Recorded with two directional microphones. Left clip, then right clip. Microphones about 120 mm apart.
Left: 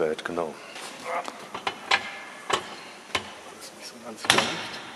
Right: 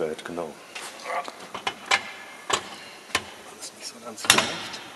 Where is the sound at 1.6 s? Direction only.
10° right (ahead or behind).